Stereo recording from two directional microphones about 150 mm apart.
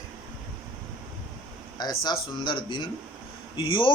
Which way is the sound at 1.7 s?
25° left (ahead or behind).